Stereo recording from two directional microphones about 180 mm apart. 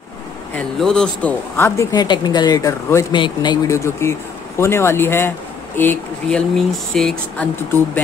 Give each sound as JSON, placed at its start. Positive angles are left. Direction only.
{"t": 0.7, "sound": "speech", "side_deg": 5}